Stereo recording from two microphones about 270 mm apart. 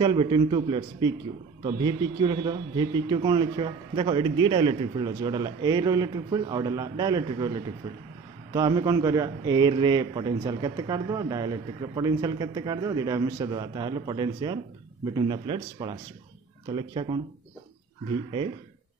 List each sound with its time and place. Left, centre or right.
0.0 s a man's voice: centre